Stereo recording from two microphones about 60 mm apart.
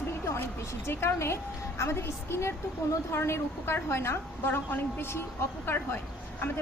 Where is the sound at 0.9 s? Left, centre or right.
Left.